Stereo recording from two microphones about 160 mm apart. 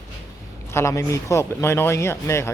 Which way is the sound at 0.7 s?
20° left (ahead or behind).